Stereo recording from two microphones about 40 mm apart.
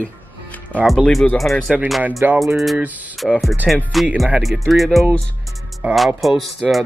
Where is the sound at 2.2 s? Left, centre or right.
Right.